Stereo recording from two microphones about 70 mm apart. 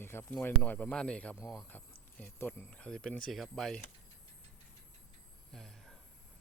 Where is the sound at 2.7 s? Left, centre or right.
Centre.